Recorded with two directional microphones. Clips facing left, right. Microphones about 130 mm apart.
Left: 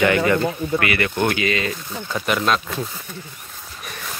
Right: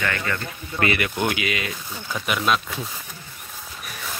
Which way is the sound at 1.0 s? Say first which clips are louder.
Left 4 dB; 15° right (ahead or behind).